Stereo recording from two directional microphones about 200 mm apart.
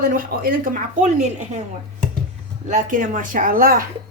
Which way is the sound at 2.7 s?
40° right (ahead or behind).